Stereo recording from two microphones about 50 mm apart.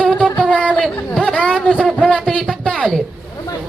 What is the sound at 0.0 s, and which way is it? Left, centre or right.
Music, centre.